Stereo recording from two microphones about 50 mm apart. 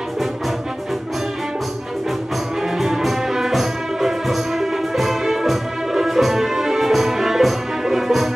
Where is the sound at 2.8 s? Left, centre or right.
Centre.